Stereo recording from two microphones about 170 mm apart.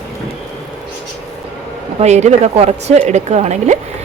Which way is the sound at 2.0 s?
40° right (ahead or behind).